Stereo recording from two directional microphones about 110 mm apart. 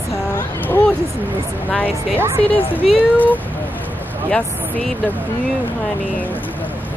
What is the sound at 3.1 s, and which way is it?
Speech, 15° left (ahead or behind).